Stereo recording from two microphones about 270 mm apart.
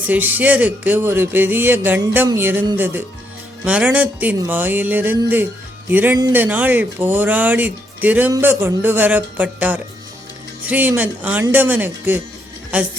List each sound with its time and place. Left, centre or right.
0.1 s speech: centre